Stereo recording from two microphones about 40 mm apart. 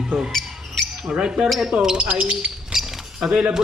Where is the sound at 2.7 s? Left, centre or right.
Centre.